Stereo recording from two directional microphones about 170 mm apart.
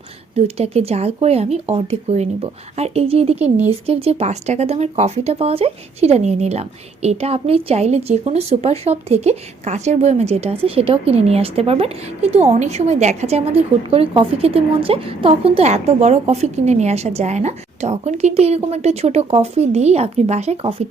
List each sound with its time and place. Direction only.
0.3 s speech: 35° right (ahead or behind)